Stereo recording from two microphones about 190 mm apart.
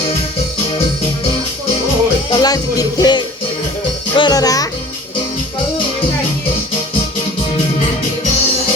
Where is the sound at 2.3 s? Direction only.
20° left (ahead or behind).